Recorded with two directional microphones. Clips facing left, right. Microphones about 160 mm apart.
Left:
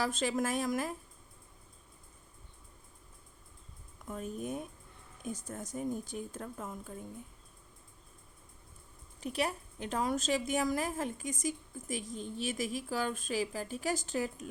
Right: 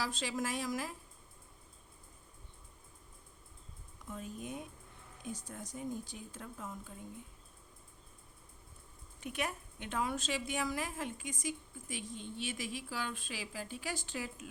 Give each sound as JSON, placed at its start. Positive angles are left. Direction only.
{"t": 0.0, "sound": "speech", "side_deg": 50}
{"t": 4.1, "sound": "speech", "side_deg": 45}
{"t": 9.2, "sound": "a woman's voice", "side_deg": 35}